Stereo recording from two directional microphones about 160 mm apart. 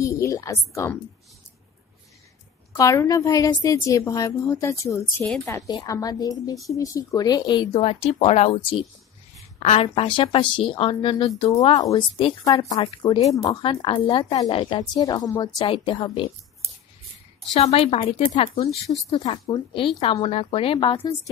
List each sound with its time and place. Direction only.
0.0 s a woman's voice: 20° left (ahead or behind)
2.7 s a woman's voice: 20° left (ahead or behind)
5.2 s a woman's voice: 5° left (ahead or behind)
5.7 s a woman's voice: 20° left (ahead or behind)
11.7 s a woman's voice: 20° left (ahead or behind)
17.6 s speech: 40° left (ahead or behind)